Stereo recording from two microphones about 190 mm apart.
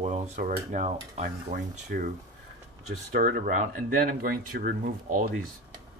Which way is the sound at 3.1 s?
45° right (ahead or behind).